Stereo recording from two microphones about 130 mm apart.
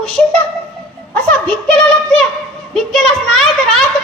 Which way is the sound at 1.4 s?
5° left (ahead or behind).